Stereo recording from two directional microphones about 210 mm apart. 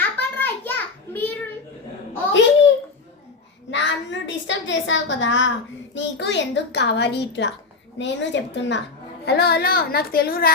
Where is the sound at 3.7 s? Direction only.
60° left (ahead or behind).